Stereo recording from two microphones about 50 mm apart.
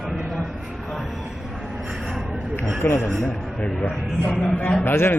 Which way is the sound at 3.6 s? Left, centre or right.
Centre.